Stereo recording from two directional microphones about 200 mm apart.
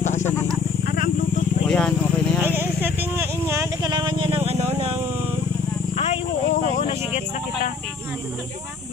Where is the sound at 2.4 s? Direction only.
10° right (ahead or behind); by 5.0 s 35° right (ahead or behind).